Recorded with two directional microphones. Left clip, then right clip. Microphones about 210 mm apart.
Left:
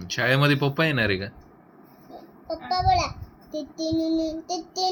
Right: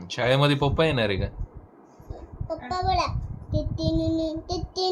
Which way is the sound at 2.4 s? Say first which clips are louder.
Left 4 dB; centre (ahead or behind).